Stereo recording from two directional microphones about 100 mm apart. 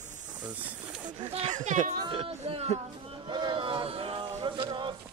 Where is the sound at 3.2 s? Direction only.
50° right (ahead or behind).